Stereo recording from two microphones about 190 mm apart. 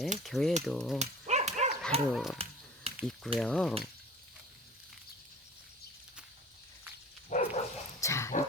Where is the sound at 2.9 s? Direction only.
30° right (ahead or behind).